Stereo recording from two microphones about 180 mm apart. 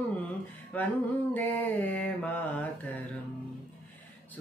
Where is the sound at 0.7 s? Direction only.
10° left (ahead or behind).